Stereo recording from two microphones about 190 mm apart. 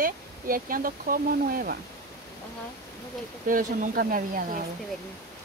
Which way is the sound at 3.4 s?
45° right (ahead or behind).